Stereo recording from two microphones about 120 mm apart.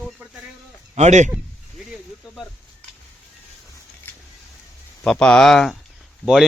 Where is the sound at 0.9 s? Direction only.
75° right (ahead or behind).